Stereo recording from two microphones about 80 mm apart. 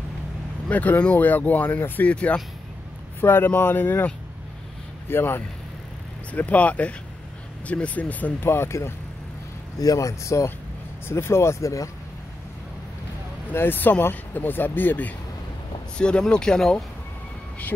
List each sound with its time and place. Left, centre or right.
0.7 s speech: left
3.2 s speech: left
9.8 s speech: left
13.5 s speech: left
16.0 s speech: centre